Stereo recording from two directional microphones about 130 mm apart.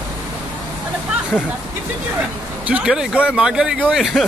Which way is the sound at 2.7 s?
5° right (ahead or behind).